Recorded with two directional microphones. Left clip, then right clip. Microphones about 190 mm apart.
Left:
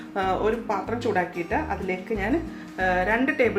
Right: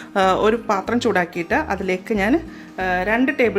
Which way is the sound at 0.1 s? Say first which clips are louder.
Right 8 dB; 50° right (ahead or behind).